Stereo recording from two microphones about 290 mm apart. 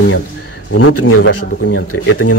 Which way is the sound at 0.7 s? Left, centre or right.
Left.